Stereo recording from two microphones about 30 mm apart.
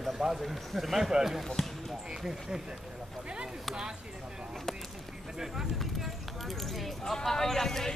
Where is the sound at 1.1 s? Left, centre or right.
Centre.